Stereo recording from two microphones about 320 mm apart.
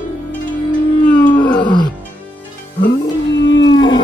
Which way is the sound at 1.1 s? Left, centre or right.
Centre.